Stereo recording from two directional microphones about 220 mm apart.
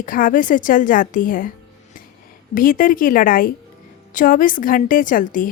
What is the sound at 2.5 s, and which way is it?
A woman's voice, 40° left (ahead or behind).